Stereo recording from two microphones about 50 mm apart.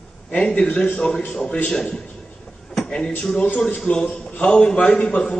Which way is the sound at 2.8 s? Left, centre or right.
Centre.